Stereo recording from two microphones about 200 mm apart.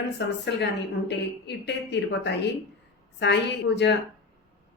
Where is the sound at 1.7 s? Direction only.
60° left (ahead or behind).